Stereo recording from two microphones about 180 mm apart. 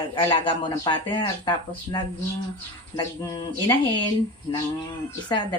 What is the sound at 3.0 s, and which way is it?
Speech, 25° left (ahead or behind).